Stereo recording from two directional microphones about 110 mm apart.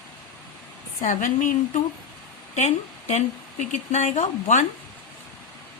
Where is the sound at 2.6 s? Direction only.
90° left.